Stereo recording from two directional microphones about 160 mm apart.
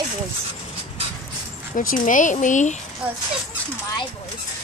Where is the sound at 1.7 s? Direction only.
55° left (ahead or behind).